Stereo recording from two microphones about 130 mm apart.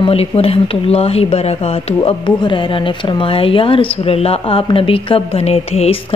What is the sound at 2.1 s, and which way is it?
Speech, 40° left (ahead or behind).